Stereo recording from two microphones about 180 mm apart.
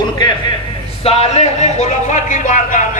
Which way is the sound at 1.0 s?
35° left (ahead or behind).